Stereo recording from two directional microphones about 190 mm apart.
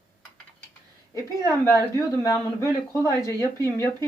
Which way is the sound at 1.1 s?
15° left (ahead or behind).